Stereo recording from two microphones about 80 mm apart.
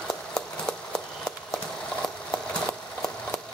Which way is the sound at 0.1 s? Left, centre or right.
Centre.